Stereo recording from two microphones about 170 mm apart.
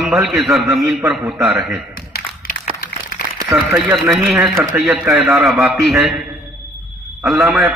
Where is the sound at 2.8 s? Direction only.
60° left (ahead or behind).